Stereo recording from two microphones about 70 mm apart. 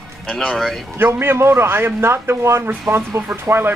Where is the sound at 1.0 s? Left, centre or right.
Right.